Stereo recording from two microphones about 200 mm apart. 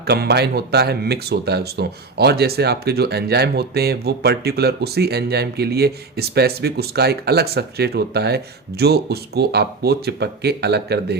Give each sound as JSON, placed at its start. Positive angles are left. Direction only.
{"t": 0.0, "sound": "speech", "side_deg": -55}